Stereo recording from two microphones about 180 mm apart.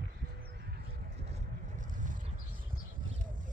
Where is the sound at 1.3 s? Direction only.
45° right (ahead or behind).